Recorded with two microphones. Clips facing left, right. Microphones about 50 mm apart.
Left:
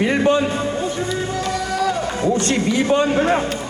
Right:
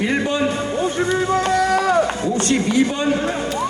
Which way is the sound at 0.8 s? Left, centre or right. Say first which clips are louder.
Right 3 dB; right.